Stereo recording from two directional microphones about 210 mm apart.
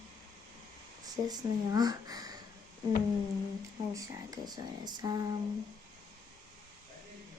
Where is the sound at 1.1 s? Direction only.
20° right (ahead or behind).